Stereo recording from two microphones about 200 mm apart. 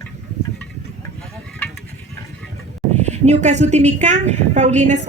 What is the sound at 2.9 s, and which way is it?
A woman's voice, 35° right (ahead or behind).